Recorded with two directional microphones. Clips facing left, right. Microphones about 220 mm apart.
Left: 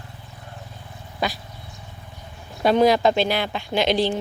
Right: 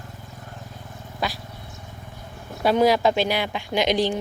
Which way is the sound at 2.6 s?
10° right (ahead or behind).